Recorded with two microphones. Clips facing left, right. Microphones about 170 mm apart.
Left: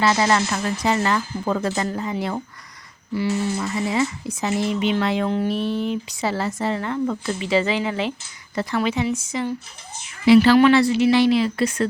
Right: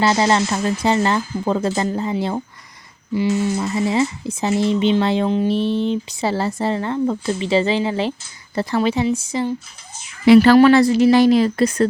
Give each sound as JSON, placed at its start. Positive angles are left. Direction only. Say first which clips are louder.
{"t": 0.0, "sound": "speech", "louder": "right 2 dB", "side_deg": -30}
{"t": 10.2, "sound": "a woman's voice", "louder": "right 3 dB", "side_deg": -50}